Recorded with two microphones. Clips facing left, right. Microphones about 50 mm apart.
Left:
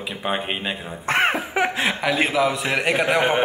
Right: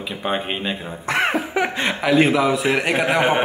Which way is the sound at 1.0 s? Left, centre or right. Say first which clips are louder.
Left 1 dB; left.